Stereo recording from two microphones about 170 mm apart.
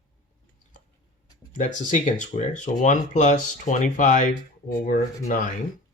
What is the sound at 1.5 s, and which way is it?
Speech, 50° left (ahead or behind).